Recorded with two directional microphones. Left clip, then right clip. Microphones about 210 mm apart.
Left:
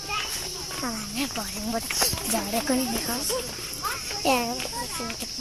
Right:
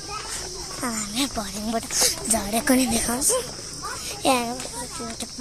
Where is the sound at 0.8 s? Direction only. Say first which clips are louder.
Right 5 dB; 15° right (ahead or behind).